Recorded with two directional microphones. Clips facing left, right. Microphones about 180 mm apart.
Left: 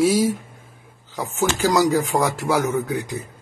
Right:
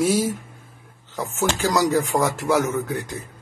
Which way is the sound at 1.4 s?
Centre (ahead or behind).